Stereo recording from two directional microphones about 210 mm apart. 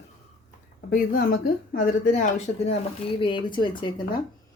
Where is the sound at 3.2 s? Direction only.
20° left (ahead or behind).